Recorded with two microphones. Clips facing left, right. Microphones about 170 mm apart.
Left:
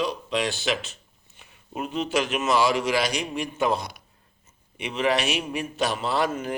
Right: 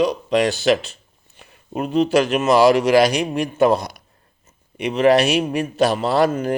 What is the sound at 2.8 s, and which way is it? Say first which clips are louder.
Speech: right 10 dB; 65° right (ahead or behind).